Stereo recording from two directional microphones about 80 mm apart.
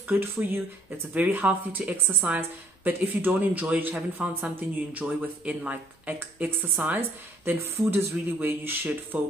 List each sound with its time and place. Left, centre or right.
0.1 s a woman's voice: right